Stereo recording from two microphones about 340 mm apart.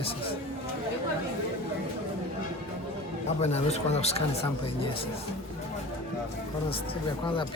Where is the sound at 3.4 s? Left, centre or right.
Centre.